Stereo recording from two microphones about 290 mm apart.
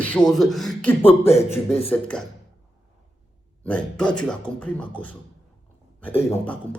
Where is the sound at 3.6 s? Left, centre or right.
Centre.